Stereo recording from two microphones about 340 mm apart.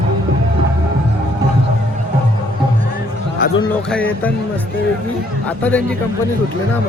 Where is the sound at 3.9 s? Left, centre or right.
Centre.